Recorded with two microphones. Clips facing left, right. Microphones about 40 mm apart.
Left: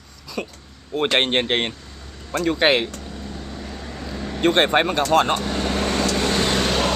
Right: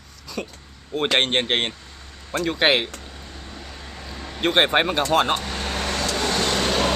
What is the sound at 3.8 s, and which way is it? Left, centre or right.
Vehicle, centre.